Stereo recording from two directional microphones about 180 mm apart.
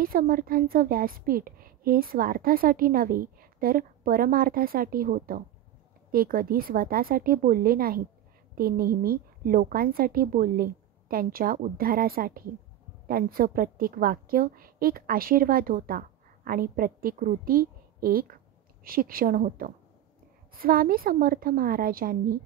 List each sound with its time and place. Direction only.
0.0 s a woman's voice: 55° right (ahead or behind)